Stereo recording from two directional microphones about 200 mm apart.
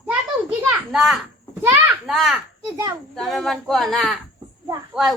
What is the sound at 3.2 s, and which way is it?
A woman's voice, centre (ahead or behind).